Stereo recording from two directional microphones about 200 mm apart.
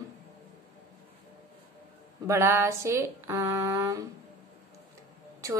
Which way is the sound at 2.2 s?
15° right (ahead or behind).